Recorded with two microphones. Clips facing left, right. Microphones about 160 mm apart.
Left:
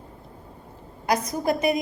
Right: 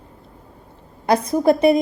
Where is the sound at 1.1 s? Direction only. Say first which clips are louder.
Right 7 dB; 30° right (ahead or behind).